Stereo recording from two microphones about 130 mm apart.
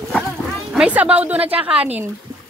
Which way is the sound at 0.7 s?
10° right (ahead or behind).